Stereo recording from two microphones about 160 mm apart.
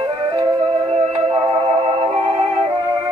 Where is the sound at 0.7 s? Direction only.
40° right (ahead or behind).